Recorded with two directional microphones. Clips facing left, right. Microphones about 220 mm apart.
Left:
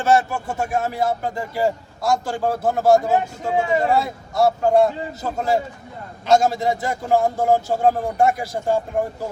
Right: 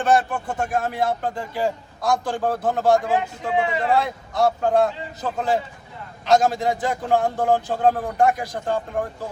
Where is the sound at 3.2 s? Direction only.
45° left (ahead or behind).